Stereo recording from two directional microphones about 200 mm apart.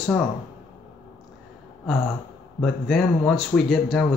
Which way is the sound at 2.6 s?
Centre (ahead or behind).